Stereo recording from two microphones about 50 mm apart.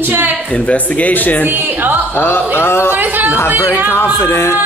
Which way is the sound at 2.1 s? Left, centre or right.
Left.